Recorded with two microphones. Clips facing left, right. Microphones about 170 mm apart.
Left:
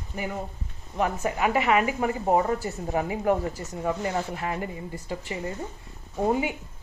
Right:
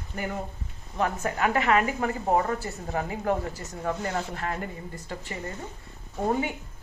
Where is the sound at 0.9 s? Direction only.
15° left (ahead or behind).